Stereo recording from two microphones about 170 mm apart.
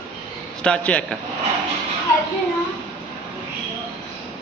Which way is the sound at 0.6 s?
5° left (ahead or behind).